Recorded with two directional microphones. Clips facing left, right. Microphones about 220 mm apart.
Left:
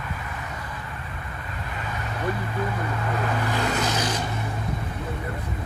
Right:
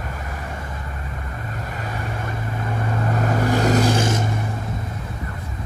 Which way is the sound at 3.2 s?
45° right (ahead or behind).